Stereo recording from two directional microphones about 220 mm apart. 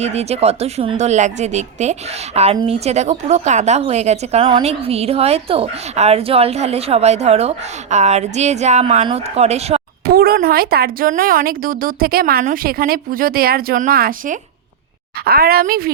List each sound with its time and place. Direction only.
0.0 s speech: 30° right (ahead or behind)
10.1 s a woman's voice: 45° right (ahead or behind)